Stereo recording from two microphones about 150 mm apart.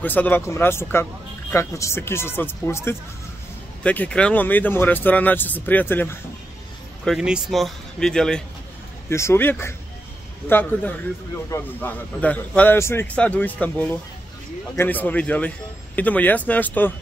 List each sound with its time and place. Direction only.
0.0 s a man's voice: 10° left (ahead or behind)
7.1 s speech: 5° right (ahead or behind)
9.1 s a man's voice: 15° left (ahead or behind)